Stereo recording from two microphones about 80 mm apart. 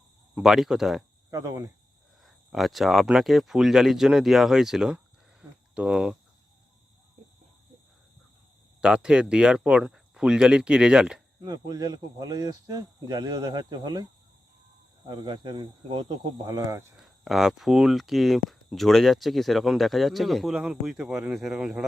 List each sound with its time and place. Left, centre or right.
0.3 s speech: centre
1.3 s cricket: right
2.2 s speech: centre
8.8 s speech: centre
11.3 s speech: right
16.5 s speech: right
17.0 s speech: centre